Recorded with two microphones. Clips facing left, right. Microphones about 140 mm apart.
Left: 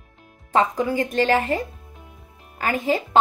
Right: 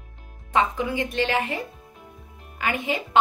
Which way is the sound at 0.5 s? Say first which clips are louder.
Left 3 dB; 40° left (ahead or behind).